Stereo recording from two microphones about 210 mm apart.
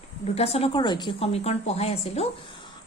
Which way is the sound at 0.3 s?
30° left (ahead or behind).